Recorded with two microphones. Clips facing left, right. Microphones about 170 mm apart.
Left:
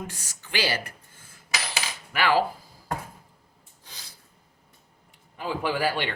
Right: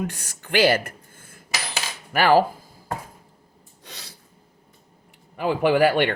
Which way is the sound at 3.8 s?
70° right (ahead or behind).